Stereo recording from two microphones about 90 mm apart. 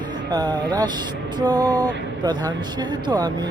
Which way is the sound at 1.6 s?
20° left (ahead or behind).